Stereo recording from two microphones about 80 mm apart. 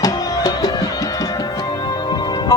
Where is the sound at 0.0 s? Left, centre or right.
Left.